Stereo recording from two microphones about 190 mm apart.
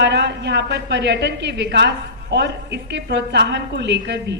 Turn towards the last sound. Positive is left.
turn(degrees=-65)  # may be behind; listen again after turning